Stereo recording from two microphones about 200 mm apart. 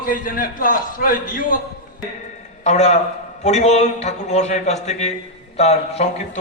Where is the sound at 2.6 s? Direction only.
35° left (ahead or behind).